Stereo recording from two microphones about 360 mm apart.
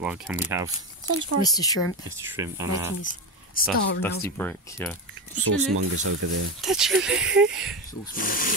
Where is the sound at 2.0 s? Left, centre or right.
Centre.